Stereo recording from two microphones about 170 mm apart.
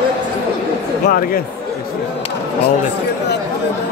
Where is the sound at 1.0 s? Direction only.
60° left (ahead or behind).